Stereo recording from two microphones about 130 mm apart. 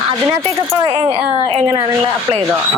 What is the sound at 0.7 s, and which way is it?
Speech, 30° right (ahead or behind).